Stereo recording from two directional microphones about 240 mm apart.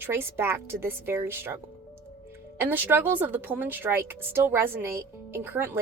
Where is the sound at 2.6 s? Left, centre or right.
Centre.